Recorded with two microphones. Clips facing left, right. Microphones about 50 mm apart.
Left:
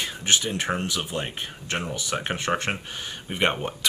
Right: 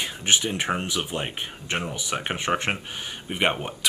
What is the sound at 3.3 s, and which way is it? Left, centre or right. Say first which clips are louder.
Speech: even; centre.